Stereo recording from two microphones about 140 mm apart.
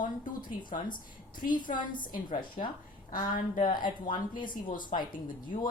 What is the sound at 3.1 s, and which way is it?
Speech, 80° left.